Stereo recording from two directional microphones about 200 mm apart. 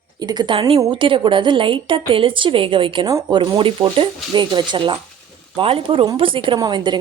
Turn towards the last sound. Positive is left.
turn(degrees=-20)  # may be behind; listen again after turning